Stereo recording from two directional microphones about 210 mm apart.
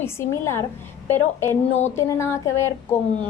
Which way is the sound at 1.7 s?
35° left (ahead or behind).